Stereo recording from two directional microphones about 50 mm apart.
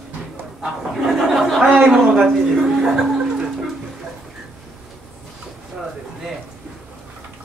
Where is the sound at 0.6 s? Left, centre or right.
Centre.